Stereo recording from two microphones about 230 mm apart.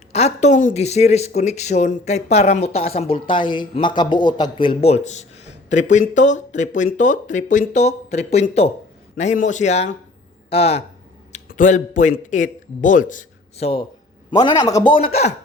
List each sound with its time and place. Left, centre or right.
0.1 s speech: left